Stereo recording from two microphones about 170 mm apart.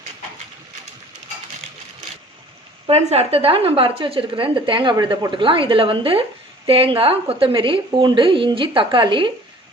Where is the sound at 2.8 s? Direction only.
35° right (ahead or behind).